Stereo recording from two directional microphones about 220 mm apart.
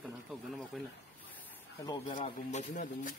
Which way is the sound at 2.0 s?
35° left (ahead or behind).